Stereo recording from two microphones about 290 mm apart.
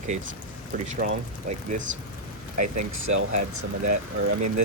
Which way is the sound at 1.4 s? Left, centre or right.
Right.